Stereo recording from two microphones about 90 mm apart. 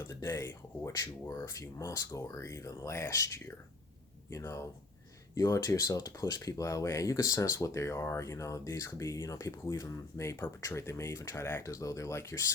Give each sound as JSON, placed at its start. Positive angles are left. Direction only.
{"t": 0.0, "sound": "speech", "side_deg": 30}